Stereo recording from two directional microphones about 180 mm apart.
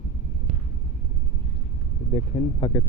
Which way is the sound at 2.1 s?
40° left (ahead or behind).